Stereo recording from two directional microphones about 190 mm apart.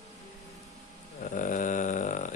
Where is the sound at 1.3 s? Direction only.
45° left (ahead or behind).